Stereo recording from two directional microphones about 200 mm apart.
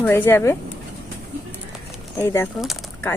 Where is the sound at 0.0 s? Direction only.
10° left (ahead or behind).